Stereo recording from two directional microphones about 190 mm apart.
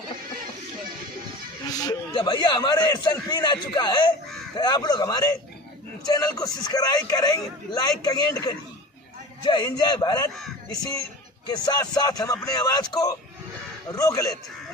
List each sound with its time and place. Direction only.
1.8 s a man's voice: 20° left (ahead or behind)